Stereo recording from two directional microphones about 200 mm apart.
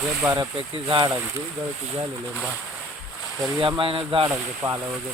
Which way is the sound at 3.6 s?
25° right (ahead or behind).